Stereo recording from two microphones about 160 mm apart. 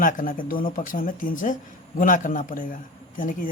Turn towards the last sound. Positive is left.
turn(degrees=55)  # may be behind; listen again after turning